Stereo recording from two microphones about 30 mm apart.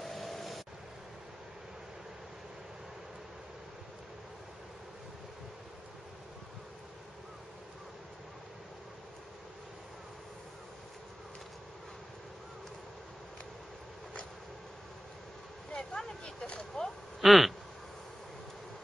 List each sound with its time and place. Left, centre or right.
0.0 s vehicle: centre
15.7 s vehicle: left
16.5 s speech: centre
17.2 s speech: centre